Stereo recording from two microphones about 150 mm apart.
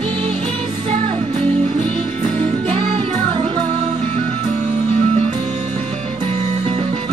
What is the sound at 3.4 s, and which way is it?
Music, 50° right (ahead or behind).